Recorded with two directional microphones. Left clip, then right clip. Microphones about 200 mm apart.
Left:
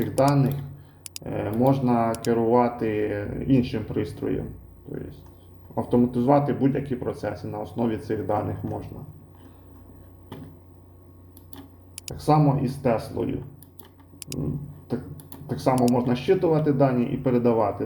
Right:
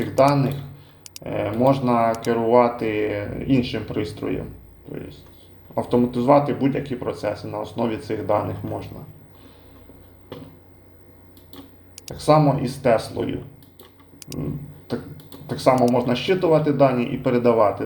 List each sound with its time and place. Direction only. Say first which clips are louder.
1.1 s speech: right 4 dB; centre (ahead or behind)
12.0 s speech: right 5 dB; centre (ahead or behind)
14.2 s a sound: right 1 dB; 5° right (ahead or behind)
15.4 s speech: right 5 dB; centre (ahead or behind)